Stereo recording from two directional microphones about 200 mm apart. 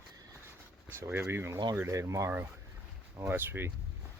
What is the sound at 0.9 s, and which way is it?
Speech, 10° right (ahead or behind).